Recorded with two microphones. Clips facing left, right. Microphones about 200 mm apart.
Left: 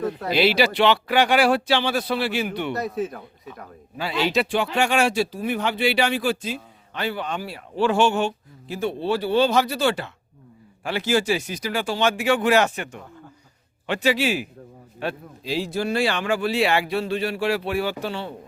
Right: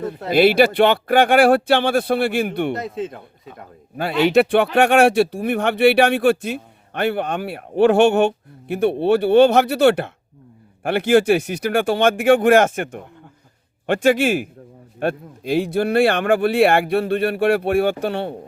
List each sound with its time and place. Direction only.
0.3 s speech: 50° right (ahead or behind)
2.7 s speech: 25° right (ahead or behind)
3.9 s speech: 55° right (ahead or behind)